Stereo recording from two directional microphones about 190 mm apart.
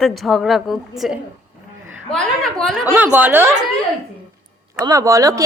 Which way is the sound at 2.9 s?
10° right (ahead or behind).